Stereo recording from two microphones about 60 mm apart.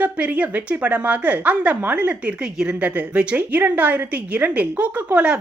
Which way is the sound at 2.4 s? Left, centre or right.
Centre.